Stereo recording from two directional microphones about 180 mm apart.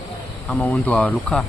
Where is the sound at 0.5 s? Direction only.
5° left (ahead or behind).